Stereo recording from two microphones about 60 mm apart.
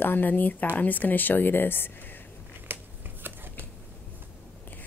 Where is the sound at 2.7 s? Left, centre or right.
Right.